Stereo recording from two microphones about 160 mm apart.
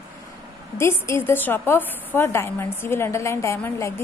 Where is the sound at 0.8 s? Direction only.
15° left (ahead or behind).